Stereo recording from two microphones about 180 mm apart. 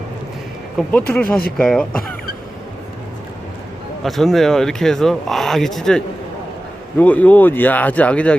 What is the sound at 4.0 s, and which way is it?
Speech, centre (ahead or behind).